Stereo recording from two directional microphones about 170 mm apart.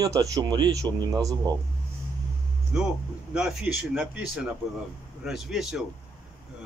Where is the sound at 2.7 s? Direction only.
5° right (ahead or behind).